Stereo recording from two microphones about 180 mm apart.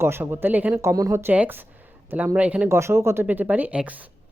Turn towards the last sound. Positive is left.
turn(degrees=-10)  # may be behind; listen again after turning